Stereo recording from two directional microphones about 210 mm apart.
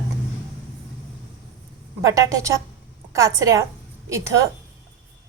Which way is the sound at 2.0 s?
15° right (ahead or behind).